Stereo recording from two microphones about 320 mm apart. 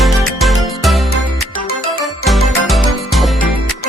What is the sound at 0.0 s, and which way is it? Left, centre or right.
Music, centre.